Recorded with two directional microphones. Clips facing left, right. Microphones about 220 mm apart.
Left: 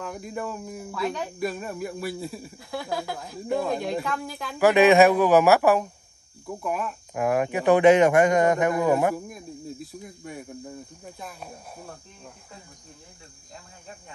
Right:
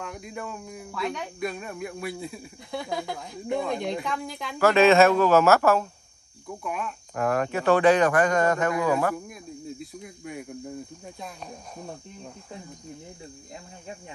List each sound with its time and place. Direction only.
0.0 s speech: centre (ahead or behind)
4.6 s speech: 15° left (ahead or behind)
6.6 s speech: 5° left (ahead or behind); by 9.1 s 20° left (ahead or behind)
9.1 s speech: centre (ahead or behind)